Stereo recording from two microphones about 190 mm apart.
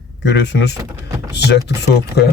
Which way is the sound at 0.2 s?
65° left (ahead or behind).